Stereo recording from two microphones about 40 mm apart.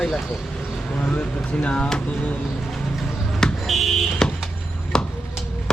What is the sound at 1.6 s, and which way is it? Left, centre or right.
Speech, left.